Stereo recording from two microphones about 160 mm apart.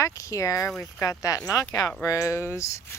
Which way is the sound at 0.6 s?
5° left (ahead or behind).